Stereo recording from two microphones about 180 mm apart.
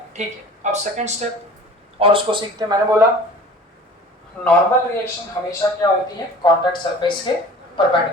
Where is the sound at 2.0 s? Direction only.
30° right (ahead or behind).